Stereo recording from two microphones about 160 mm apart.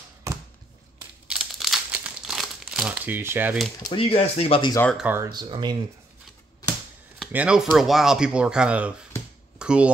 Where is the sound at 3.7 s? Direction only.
25° left (ahead or behind).